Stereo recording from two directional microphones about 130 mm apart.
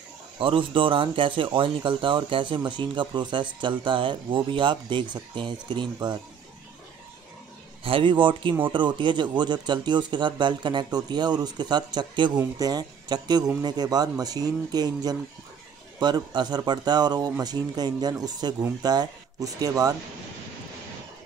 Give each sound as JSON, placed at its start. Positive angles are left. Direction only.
{"t": 0.4, "sound": "speech", "side_deg": -45}
{"t": 7.8, "sound": "speech", "side_deg": -40}